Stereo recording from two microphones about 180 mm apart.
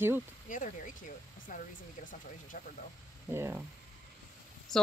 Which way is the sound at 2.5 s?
45° left (ahead or behind).